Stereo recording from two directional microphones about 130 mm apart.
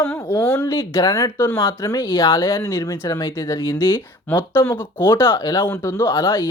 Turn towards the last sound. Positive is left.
turn(degrees=20)  # may be behind; listen again after turning